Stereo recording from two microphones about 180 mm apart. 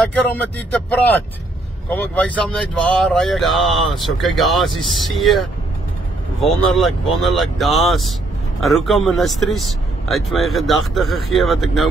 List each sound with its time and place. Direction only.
0.1 s speech: 10° left (ahead or behind)
6.7 s speech: centre (ahead or behind)